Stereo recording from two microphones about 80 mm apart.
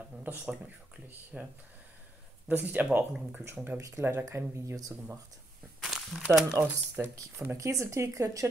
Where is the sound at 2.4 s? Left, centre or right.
Right.